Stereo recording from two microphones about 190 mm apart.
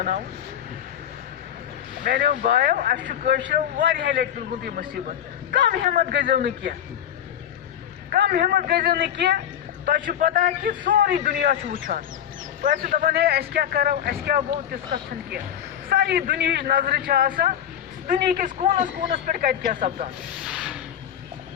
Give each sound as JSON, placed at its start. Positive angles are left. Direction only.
{"t": 2.0, "sound": "a man's voice", "side_deg": -45}
{"t": 8.1, "sound": "a man's voice", "side_deg": -55}
{"t": 9.8, "sound": "speech", "side_deg": -45}
{"t": 12.6, "sound": "speech", "side_deg": -45}
{"t": 15.9, "sound": "speech", "side_deg": -55}
{"t": 20.4, "sound": "a sound", "side_deg": -5}